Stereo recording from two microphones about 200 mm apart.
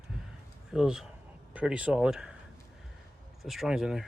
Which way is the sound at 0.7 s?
Centre (ahead or behind).